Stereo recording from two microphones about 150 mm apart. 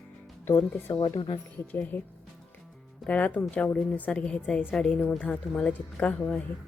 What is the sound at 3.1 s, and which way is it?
Speech, 10° left (ahead or behind).